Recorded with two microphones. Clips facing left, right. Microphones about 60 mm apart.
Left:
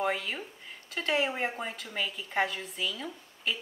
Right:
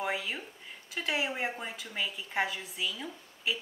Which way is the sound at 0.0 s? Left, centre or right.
Centre.